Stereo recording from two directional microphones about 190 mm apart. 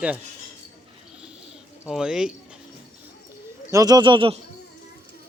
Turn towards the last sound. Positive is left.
turn(degrees=-30)  # may be behind; listen again after turning